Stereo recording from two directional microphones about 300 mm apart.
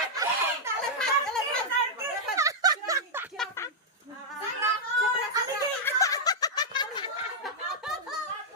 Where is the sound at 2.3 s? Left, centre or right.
Centre.